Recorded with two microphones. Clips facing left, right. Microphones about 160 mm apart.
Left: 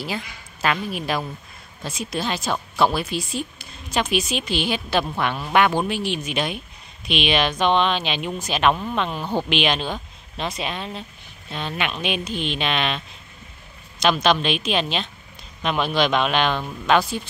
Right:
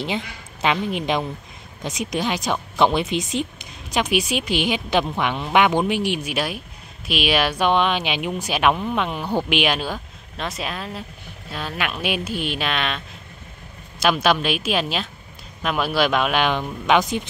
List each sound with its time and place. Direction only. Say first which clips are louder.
0.0 s a woman's voice: right 3 dB; 20° right (ahead or behind)